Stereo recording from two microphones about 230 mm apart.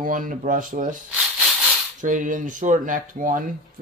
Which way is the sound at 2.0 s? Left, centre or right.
Right.